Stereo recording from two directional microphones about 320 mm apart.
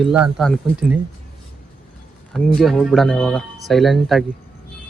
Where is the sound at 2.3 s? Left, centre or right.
Centre.